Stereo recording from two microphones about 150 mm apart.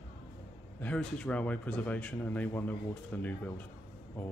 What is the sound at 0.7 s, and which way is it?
Speech, 10° left (ahead or behind).